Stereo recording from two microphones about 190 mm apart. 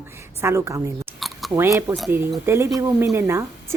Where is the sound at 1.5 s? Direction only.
15° right (ahead or behind).